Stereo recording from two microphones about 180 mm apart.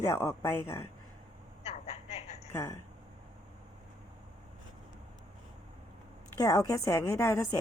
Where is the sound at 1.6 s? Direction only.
35° left (ahead or behind).